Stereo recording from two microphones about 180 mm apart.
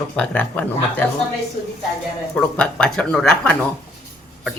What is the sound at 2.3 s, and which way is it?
Speech, 5° left (ahead or behind).